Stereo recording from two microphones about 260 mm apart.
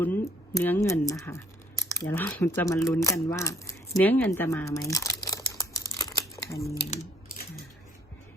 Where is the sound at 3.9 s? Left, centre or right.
Centre.